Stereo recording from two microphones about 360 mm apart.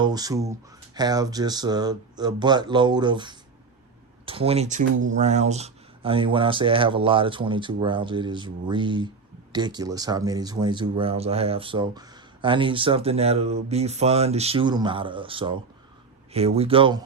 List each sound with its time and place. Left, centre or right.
0.0 s speech: centre